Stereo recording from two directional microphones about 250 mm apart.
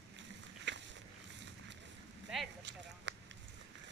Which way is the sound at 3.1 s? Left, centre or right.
Right.